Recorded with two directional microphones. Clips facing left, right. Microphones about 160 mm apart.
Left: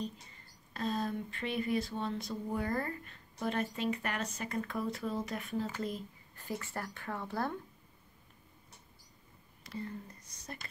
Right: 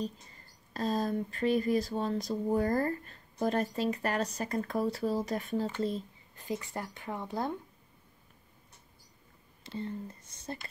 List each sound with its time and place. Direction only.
0.0 s speech: 40° right (ahead or behind)
6.3 s speech: 20° right (ahead or behind)
9.6 s speech: 25° right (ahead or behind)